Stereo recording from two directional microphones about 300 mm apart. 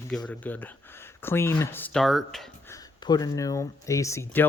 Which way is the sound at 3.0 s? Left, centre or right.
Centre.